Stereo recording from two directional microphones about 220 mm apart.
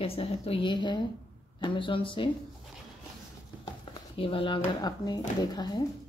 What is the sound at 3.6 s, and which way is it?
Speech, 25° left (ahead or behind).